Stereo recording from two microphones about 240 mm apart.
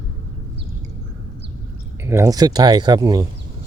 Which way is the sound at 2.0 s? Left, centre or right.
Centre.